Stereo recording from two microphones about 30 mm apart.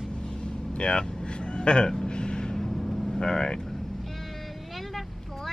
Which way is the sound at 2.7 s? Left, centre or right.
Centre.